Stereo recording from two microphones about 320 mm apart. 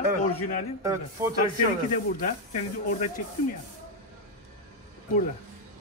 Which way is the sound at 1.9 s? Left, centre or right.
Left.